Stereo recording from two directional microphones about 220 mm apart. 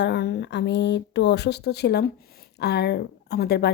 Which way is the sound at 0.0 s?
50° left (ahead or behind).